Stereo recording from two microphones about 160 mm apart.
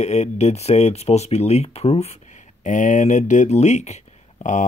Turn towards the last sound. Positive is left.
turn(degrees=50)  # may be behind; listen again after turning